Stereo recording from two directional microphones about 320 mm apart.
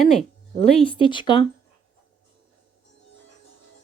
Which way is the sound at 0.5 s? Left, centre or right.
Centre.